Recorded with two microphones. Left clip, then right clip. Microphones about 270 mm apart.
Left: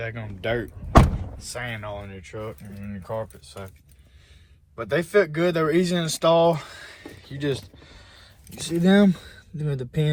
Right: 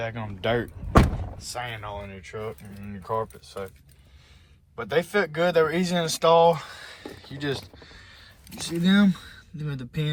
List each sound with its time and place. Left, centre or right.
0.0 s speech: centre
4.8 s speech: centre